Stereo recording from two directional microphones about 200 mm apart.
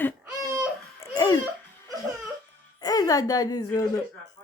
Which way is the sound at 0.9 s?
20° left (ahead or behind).